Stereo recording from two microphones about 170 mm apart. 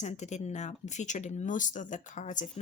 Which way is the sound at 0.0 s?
45° left (ahead or behind).